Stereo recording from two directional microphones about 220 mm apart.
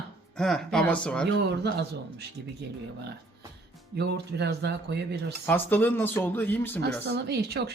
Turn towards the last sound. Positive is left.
turn(degrees=-50)  # may be behind; listen again after turning